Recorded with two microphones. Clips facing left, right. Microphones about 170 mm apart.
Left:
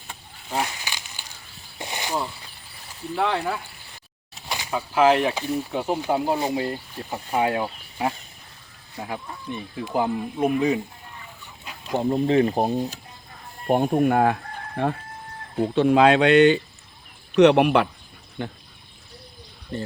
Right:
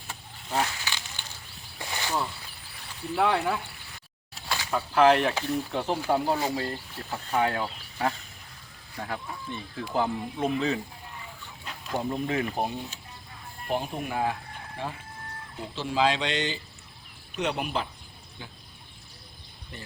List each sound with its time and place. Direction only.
0.1 s a sound: 10° left (ahead or behind)
3.2 s speech: 5° right (ahead or behind)
4.4 s speech: 15° left (ahead or behind)
11.6 s chicken: 10° left (ahead or behind)
11.9 s speech: 25° left (ahead or behind)
13.7 s speech: 50° left (ahead or behind)